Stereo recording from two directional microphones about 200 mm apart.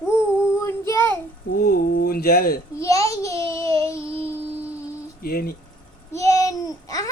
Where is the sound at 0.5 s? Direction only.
15° left (ahead or behind).